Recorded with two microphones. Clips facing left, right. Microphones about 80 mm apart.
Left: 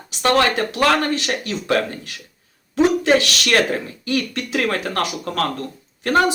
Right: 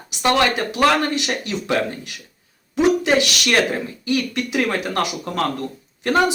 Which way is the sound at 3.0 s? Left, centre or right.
Centre.